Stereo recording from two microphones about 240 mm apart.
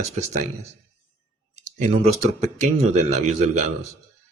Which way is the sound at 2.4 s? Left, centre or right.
Right.